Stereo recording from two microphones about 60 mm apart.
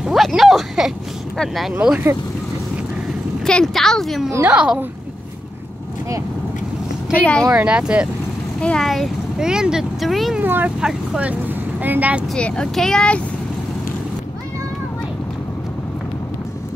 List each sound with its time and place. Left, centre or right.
0.0 s speech: centre
3.4 s a woman's voice: centre
4.5 s speech: centre
7.2 s speech: left
7.5 s speech: centre
8.5 s speech: centre
8.8 s speech: centre
9.4 s speech: centre
10.4 s speech: right
12.4 s a woman's voice: centre